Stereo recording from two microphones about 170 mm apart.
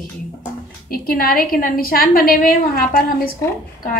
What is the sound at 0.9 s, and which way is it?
A woman's voice, 60° left (ahead or behind).